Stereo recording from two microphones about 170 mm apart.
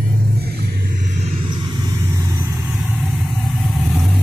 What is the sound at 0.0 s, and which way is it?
Vehicle, 65° right (ahead or behind).